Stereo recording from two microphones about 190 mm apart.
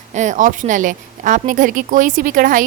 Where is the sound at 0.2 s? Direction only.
40° right (ahead or behind).